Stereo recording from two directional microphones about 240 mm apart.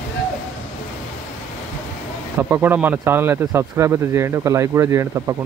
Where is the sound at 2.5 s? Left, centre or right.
Centre.